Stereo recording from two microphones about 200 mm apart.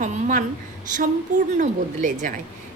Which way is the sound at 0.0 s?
40° right (ahead or behind).